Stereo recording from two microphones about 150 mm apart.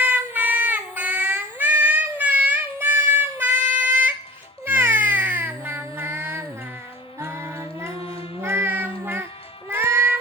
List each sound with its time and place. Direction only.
0.0 s child singing: 10° right (ahead or behind)
4.6 s cat: 15° right (ahead or behind)
7.2 s music: 15° right (ahead or behind)
8.0 s child singing: 40° left (ahead or behind)
8.4 s music: 15° right (ahead or behind)